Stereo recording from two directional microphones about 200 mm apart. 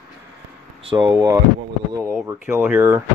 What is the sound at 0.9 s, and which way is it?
Speech, 25° right (ahead or behind).